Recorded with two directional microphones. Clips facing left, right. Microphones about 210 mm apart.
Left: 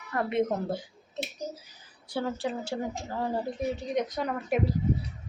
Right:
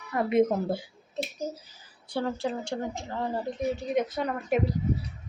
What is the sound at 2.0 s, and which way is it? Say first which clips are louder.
A woman's voice: right 1 dB; 5° left (ahead or behind).